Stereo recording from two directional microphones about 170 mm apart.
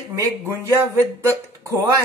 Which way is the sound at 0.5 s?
15° right (ahead or behind).